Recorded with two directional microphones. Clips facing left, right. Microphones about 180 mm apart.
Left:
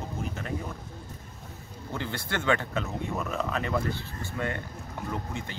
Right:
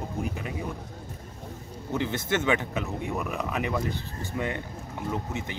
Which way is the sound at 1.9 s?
20° right (ahead or behind).